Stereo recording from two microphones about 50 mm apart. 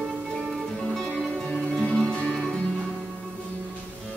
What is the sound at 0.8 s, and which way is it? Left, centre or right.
Music, centre.